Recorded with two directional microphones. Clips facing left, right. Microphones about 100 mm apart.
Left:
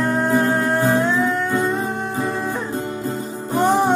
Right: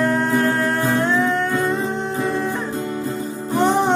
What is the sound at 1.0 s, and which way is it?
Music, 5° left (ahead or behind).